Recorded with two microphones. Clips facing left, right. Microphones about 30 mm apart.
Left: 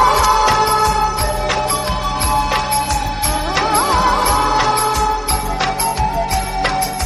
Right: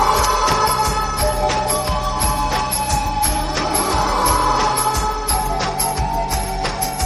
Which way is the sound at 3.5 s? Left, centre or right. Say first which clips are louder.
Left 7 dB; left.